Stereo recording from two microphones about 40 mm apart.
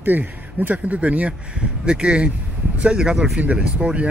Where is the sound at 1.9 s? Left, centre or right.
Right.